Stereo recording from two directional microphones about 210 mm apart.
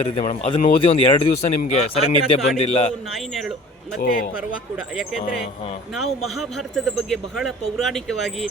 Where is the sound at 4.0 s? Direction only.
45° left (ahead or behind).